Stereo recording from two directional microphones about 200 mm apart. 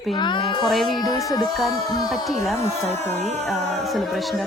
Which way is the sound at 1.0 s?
20° left (ahead or behind).